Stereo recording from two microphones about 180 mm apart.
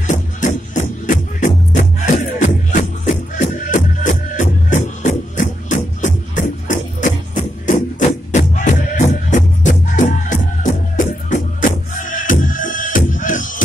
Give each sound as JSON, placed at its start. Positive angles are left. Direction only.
{"t": 0.0, "sound": "music", "side_deg": 45}
{"t": 8.3, "sound": "music", "side_deg": 40}